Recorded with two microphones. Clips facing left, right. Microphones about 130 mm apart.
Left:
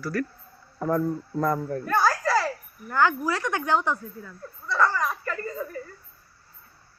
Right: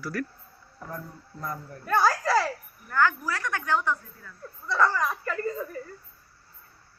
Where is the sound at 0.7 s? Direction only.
75° left (ahead or behind).